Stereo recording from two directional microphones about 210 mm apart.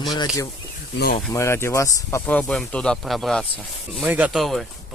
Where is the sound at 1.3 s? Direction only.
15° left (ahead or behind).